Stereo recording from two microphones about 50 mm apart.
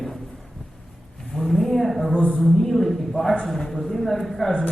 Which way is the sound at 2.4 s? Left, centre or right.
Centre.